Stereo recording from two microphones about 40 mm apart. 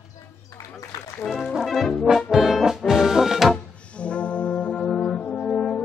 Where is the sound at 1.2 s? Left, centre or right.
Left.